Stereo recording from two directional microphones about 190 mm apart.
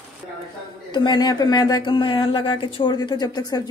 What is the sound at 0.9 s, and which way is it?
Speech, 25° left (ahead or behind).